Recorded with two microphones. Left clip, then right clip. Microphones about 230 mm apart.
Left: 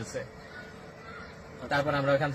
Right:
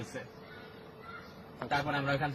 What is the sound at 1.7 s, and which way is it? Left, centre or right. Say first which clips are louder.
Speech: left 6 dB; centre.